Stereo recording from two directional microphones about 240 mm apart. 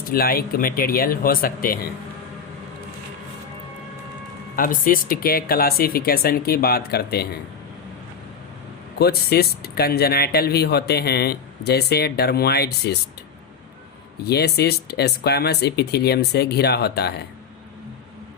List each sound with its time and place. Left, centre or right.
0.1 s speech: left
4.5 s speech: left
9.0 s speech: left
14.3 s speech: left